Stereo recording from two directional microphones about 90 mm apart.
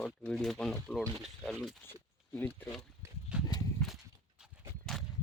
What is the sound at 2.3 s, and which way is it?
Speech, 25° left (ahead or behind).